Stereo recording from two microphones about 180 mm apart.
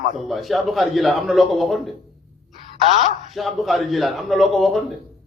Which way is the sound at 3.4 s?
Centre (ahead or behind).